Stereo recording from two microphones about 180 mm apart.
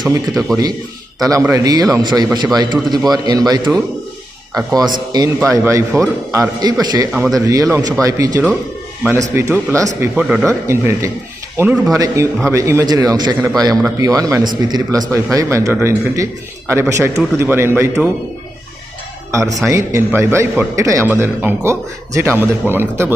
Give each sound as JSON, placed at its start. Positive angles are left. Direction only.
{"t": 1.2, "sound": "a man's voice", "side_deg": -15}
{"t": 7.1, "sound": "a man's voice", "side_deg": 0}
{"t": 7.3, "sound": "a man's voice", "side_deg": -20}
{"t": 10.0, "sound": "a man's voice", "side_deg": -5}
{"t": 19.3, "sound": "a man's voice", "side_deg": -20}